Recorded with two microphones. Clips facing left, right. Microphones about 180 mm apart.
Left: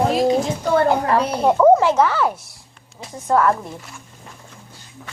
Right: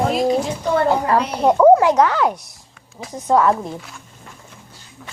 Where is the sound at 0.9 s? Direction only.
Centre (ahead or behind).